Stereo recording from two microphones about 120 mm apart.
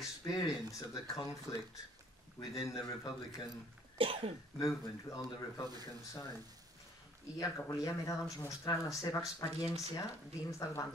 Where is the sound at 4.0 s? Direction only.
50° right (ahead or behind).